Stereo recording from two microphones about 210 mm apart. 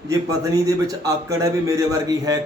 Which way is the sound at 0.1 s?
15° right (ahead or behind).